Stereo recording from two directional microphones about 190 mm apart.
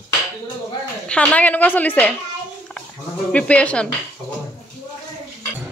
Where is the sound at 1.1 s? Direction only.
5° left (ahead or behind).